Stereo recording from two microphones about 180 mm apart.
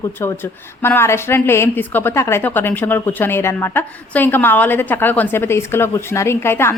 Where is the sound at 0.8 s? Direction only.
15° left (ahead or behind).